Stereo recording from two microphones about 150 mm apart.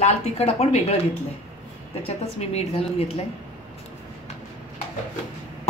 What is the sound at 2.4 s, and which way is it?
Speech, 45° left (ahead or behind).